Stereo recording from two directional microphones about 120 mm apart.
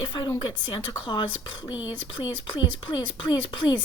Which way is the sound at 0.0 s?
40° left (ahead or behind).